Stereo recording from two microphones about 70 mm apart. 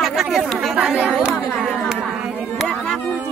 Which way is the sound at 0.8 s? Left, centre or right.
Centre.